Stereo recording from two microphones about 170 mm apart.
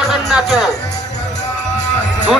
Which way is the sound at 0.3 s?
Centre (ahead or behind).